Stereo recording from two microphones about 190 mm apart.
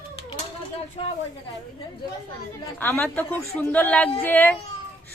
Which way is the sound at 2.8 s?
10° left (ahead or behind).